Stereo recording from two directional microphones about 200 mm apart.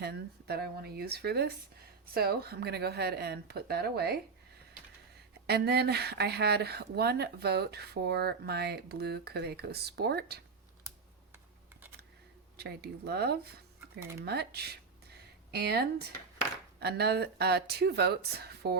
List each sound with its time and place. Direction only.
0.0 s speech: 50° right (ahead or behind)
5.5 s speech: 55° right (ahead or behind)
12.5 s speech: 55° right (ahead or behind)
14.0 s speech: 15° right (ahead or behind)
14.3 s speech: 55° right (ahead or behind)